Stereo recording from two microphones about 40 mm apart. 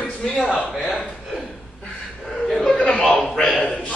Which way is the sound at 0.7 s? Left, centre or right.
Centre.